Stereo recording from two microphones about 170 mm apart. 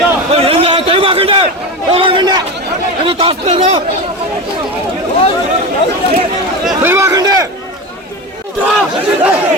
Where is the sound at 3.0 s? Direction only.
30° right (ahead or behind).